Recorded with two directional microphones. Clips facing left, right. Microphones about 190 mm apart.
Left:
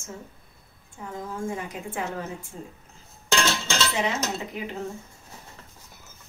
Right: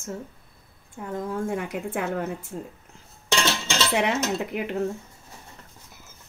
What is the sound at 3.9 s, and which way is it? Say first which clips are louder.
Speech: right 4 dB; 65° right (ahead or behind).